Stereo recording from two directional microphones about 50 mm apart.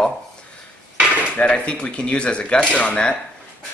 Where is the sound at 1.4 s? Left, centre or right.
Left.